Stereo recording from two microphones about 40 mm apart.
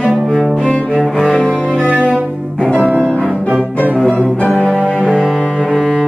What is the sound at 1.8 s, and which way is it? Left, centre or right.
Music, right.